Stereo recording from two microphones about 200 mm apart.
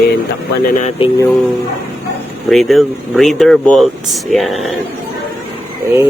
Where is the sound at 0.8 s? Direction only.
30° left (ahead or behind).